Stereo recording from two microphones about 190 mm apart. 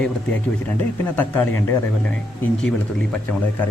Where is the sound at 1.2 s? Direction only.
10° left (ahead or behind).